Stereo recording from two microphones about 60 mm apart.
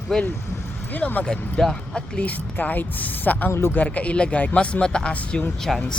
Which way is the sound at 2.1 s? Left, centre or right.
Left.